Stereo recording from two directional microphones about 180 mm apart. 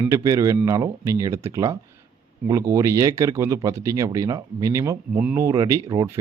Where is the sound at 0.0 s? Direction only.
20° right (ahead or behind).